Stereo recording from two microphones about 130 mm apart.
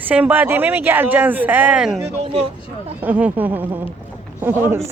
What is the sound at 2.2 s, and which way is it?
Speech, 45° right (ahead or behind).